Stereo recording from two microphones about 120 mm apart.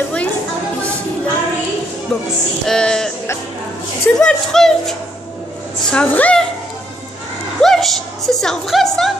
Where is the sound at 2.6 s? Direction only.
5° left (ahead or behind).